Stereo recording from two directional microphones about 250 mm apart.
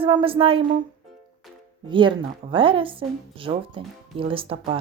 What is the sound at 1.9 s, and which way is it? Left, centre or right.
Speech, centre.